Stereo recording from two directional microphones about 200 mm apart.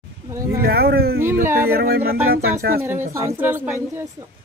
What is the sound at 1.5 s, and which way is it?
Speech, 10° right (ahead or behind).